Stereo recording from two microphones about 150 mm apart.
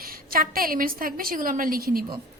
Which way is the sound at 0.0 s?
75° right (ahead or behind).